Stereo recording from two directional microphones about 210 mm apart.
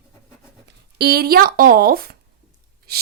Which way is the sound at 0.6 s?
50° right (ahead or behind).